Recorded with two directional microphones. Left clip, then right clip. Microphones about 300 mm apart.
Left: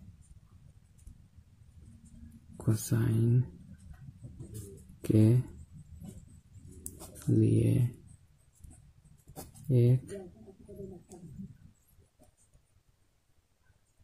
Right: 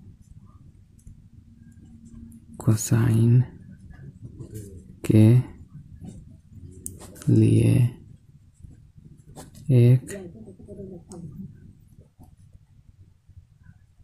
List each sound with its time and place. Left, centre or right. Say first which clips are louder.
2.5 s speech: right 8 dB; centre
5.0 s speech: right 7 dB; centre
7.2 s speech: right 7 dB; centre
9.7 s speech: right 7 dB; centre